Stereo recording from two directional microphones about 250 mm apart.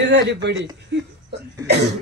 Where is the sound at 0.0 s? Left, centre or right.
Right.